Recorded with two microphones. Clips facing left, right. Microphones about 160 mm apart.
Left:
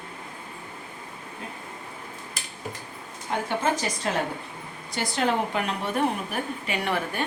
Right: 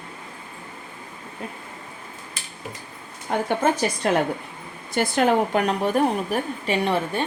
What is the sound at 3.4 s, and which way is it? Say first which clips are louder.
A woman's voice: right 5 dB; 55° right (ahead or behind).